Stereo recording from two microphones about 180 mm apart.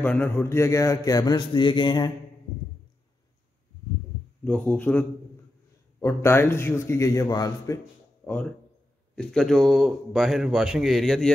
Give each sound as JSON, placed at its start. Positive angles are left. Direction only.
{"t": 0.0, "sound": "a man's voice", "side_deg": 10}
{"t": 4.5, "sound": "a man's voice", "side_deg": 10}
{"t": 8.2, "sound": "a sound", "side_deg": 10}
{"t": 9.1, "sound": "a man's voice", "side_deg": 5}